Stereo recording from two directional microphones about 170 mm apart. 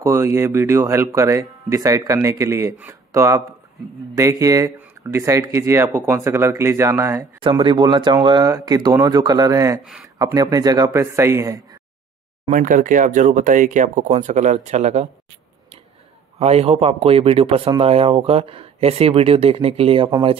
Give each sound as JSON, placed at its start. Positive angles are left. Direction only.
{"t": 0.0, "sound": "speech", "side_deg": -15}
{"t": 7.3, "sound": "speech", "side_deg": -30}
{"t": 12.4, "sound": "speech", "side_deg": -50}
{"t": 16.3, "sound": "speech", "side_deg": -40}